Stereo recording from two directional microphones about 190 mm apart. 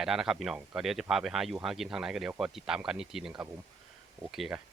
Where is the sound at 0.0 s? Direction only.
5° right (ahead or behind).